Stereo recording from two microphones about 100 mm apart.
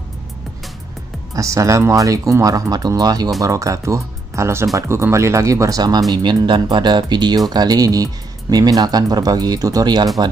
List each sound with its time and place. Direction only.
1.3 s speech: 30° right (ahead or behind)